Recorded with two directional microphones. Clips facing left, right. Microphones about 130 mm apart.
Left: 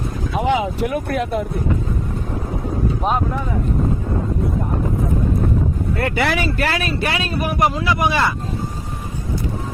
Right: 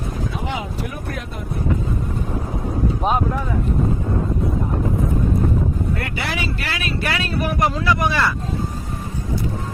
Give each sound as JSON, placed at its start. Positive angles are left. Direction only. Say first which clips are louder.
{"t": 0.3, "sound": "speech", "louder": "left 8 dB", "side_deg": 90}
{"t": 6.1, "sound": "speech", "louder": "left 6 dB", "side_deg": 60}
{"t": 6.8, "sound": "speech", "louder": "left 2 dB", "side_deg": 25}